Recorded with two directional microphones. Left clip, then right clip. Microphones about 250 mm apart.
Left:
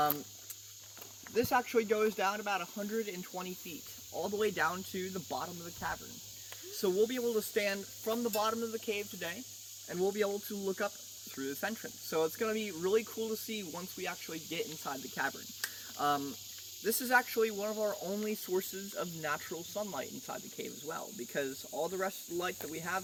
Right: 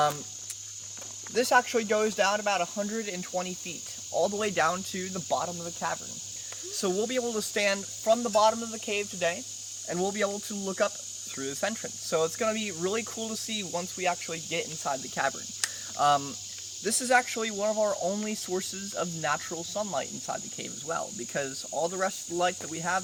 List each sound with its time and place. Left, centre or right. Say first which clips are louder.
1.3 s speech: right 7 dB; right
6.7 s speech: right 3 dB; right
15.6 s cricket: right 8 dB; right
16.8 s speech: right 5 dB; right